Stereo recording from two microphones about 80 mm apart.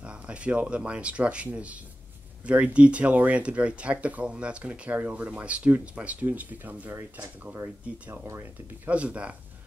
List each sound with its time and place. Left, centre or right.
0.0 s speech: centre